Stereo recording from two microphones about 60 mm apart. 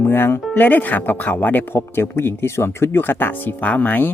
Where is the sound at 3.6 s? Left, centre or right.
Left.